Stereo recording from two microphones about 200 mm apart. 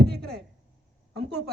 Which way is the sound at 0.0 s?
55° right (ahead or behind).